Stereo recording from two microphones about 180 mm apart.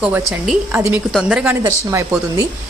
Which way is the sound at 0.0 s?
5° right (ahead or behind).